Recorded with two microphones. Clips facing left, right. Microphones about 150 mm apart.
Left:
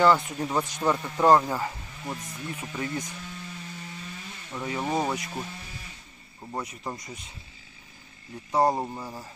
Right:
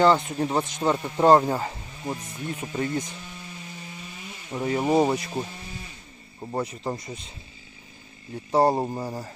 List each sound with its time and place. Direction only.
0.0 s speech: 25° right (ahead or behind)
4.5 s speech: 30° right (ahead or behind)
6.5 s speech: 30° right (ahead or behind)
8.5 s speech: 30° right (ahead or behind)